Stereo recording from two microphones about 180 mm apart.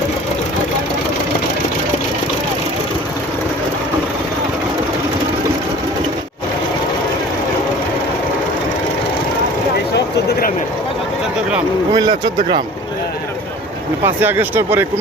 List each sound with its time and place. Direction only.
11.9 s speech: 25° right (ahead or behind)
14.0 s speech: 10° right (ahead or behind)